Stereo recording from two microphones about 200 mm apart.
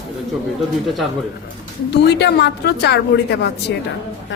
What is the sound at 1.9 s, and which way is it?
A woman's voice, 55° left (ahead or behind).